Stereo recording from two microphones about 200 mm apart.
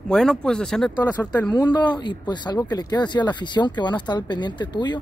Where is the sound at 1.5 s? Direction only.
20° left (ahead or behind).